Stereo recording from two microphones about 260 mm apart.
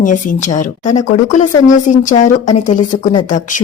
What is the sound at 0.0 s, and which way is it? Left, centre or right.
Speech, left.